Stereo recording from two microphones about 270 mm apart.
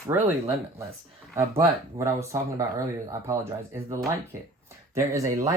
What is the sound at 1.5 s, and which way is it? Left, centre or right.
Speech, centre.